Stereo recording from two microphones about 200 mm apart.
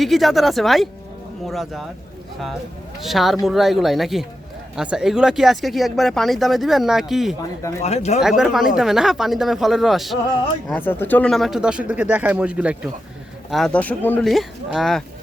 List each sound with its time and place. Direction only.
0.0 s speech: centre (ahead or behind)
3.0 s speech: centre (ahead or behind)
7.8 s speech: 30° left (ahead or behind)
8.2 s speech: centre (ahead or behind)
10.7 s speech: 10° left (ahead or behind)